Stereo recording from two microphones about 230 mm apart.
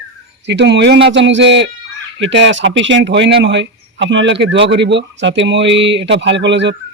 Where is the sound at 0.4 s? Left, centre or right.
Right.